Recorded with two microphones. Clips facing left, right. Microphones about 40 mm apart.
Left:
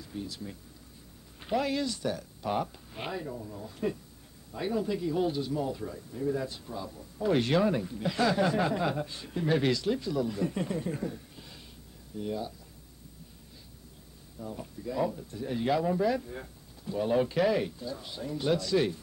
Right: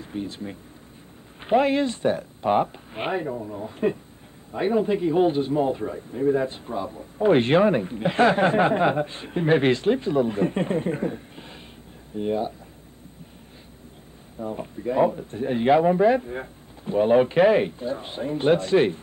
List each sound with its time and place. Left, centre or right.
0.0 s speech: right
14.4 s speech: right